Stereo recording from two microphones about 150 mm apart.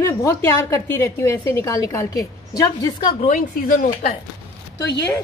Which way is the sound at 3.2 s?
60° left (ahead or behind).